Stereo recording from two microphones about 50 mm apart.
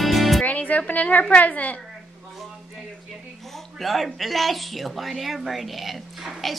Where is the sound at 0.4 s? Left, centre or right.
Left.